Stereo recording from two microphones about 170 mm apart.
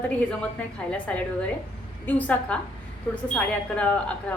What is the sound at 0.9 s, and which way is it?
A woman's voice, 5° left (ahead or behind).